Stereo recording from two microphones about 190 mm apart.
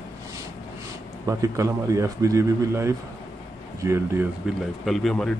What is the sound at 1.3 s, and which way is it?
A man's voice, 15° right (ahead or behind).